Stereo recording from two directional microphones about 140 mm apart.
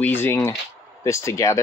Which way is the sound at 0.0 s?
15° left (ahead or behind).